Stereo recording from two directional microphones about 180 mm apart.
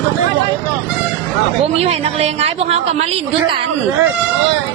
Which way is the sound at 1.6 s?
35° right (ahead or behind).